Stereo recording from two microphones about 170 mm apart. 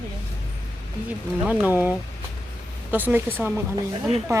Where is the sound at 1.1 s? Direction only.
10° right (ahead or behind).